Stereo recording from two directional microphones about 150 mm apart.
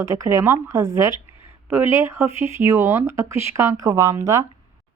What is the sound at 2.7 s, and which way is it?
A woman's voice, 15° right (ahead or behind).